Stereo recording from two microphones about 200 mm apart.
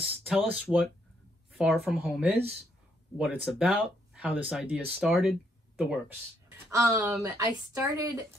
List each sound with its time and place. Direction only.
0.0 s speech: 5° right (ahead or behind)